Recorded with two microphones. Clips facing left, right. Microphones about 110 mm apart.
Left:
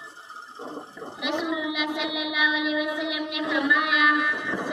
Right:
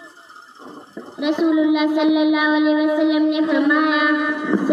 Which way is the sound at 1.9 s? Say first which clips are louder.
Right 14 dB; 45° right (ahead or behind).